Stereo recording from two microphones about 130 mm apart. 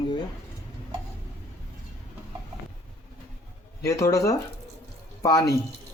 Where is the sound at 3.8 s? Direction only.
25° left (ahead or behind).